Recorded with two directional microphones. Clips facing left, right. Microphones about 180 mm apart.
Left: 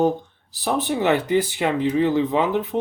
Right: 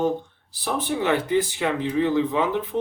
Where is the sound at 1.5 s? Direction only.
20° left (ahead or behind).